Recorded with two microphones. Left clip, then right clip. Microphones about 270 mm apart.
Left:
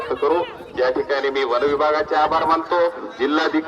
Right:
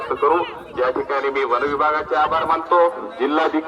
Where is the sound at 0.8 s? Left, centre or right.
Centre.